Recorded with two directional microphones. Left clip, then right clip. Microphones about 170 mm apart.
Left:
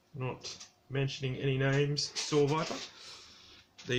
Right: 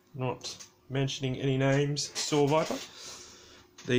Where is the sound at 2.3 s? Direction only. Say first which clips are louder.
Right 4 dB; 40° right (ahead or behind).